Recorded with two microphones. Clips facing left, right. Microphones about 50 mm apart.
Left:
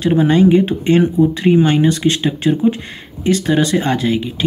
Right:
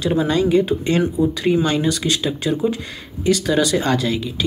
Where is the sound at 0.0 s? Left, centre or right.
Left.